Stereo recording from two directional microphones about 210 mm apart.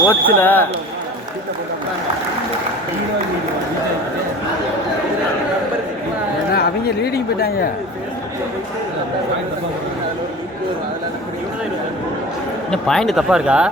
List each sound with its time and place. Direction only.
0.1 s speech: 10° left (ahead or behind)
6.5 s speech: 45° left (ahead or behind)
12.7 s speech: centre (ahead or behind)